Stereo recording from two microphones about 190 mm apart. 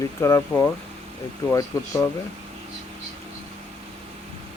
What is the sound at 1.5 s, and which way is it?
Speech, 15° left (ahead or behind).